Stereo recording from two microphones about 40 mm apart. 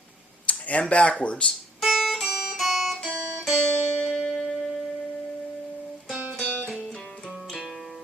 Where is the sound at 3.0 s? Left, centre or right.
Right.